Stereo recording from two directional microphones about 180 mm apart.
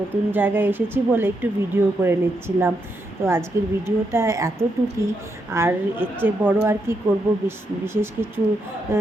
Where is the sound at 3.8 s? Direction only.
15° right (ahead or behind).